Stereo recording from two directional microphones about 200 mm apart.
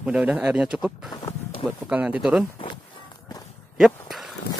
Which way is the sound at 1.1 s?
20° left (ahead or behind).